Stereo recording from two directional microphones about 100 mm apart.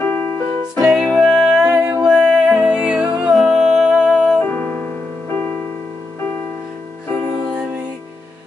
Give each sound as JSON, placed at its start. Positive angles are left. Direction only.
{"t": 0.0, "sound": "music", "side_deg": 20}
{"t": 0.7, "sound": "music", "side_deg": -5}
{"t": 1.7, "sound": "music", "side_deg": -25}
{"t": 2.0, "sound": "music", "side_deg": -5}
{"t": 4.4, "sound": "music", "side_deg": 15}